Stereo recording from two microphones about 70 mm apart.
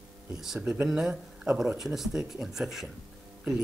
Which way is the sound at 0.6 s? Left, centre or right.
Centre.